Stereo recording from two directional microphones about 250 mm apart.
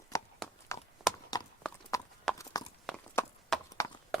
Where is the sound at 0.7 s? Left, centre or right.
Centre.